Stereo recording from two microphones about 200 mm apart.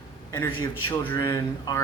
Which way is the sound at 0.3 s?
15° left (ahead or behind).